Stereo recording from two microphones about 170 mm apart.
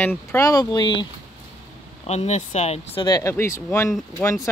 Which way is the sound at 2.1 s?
40° left (ahead or behind).